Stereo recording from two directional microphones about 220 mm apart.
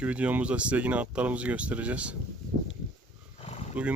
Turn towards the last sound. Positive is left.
turn(degrees=-5)  # may be behind; listen again after turning